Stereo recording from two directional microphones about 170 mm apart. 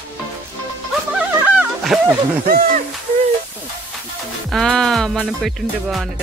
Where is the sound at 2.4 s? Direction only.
55° right (ahead or behind).